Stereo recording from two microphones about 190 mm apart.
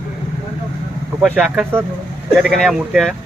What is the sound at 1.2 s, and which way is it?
Speech, 5° right (ahead or behind).